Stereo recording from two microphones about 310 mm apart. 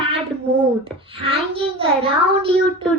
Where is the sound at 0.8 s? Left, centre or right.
Centre.